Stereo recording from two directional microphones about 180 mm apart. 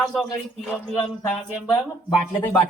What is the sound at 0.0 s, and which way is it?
Speech, centre (ahead or behind).